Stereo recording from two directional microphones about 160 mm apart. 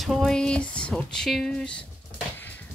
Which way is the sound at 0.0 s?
Centre (ahead or behind).